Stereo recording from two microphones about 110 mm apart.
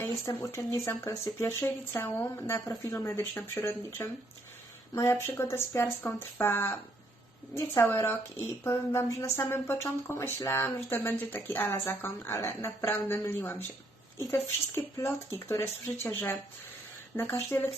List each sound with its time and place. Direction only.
0.0 s speech: 25° left (ahead or behind)
15.4 s speech: 20° left (ahead or behind)